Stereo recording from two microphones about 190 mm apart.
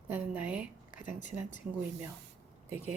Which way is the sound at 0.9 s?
45° left (ahead or behind).